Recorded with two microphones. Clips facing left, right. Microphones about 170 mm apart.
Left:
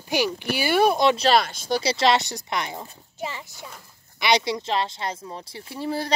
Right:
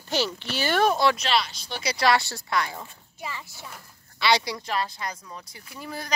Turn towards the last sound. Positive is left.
turn(degrees=30)  # may be behind; listen again after turning